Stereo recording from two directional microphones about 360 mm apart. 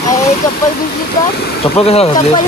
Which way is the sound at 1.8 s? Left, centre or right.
Centre.